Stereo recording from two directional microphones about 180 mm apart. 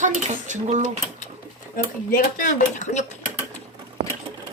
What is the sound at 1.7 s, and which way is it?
Speech, 50° left (ahead or behind).